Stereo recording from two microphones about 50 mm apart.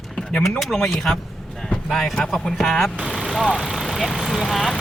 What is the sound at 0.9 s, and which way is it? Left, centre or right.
Speech, centre.